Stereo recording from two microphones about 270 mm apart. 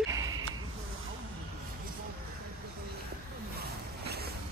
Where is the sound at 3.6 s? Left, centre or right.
Right.